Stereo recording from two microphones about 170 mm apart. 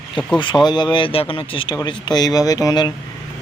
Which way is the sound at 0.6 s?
25° left (ahead or behind).